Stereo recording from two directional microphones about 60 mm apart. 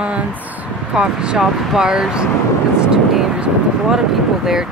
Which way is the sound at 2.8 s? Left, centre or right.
Centre.